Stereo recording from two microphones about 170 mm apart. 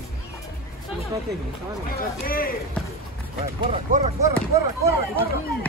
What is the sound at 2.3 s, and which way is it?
Speech, 60° left (ahead or behind).